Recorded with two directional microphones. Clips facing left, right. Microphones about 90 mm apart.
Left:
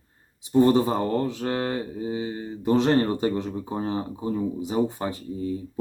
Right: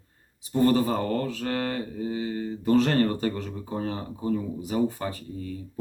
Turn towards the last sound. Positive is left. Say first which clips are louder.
# left 5 dB
turn(degrees=20)  # may be behind; listen again after turning